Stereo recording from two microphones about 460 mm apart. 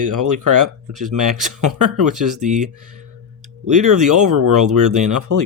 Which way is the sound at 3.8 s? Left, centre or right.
Right.